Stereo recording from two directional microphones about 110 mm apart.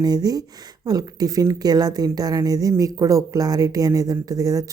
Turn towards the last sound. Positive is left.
turn(degrees=-30)  # may be behind; listen again after turning